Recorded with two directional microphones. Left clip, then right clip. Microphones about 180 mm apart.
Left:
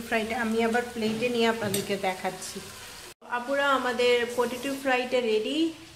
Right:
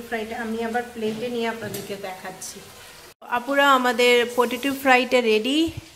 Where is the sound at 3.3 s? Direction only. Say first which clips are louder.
Right 7 dB; 50° right (ahead or behind).